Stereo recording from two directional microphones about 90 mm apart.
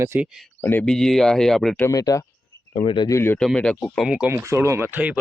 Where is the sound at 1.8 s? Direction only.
40° left (ahead or behind).